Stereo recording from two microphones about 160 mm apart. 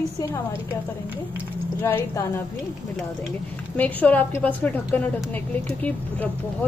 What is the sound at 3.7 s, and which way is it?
A woman's voice, 10° left (ahead or behind).